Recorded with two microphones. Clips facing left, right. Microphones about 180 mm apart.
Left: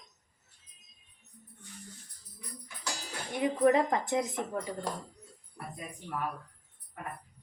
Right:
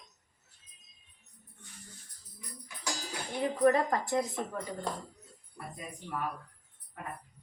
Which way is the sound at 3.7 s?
20° left (ahead or behind).